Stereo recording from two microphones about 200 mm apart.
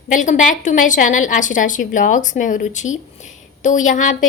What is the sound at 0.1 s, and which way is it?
A woman's voice, 40° left (ahead or behind).